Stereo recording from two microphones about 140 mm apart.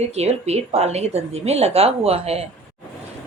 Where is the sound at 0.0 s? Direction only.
50° right (ahead or behind).